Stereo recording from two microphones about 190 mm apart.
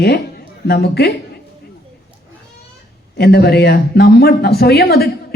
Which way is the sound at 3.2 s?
55° left (ahead or behind).